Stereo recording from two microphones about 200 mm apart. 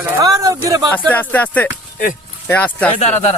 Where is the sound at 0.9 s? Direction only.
10° left (ahead or behind).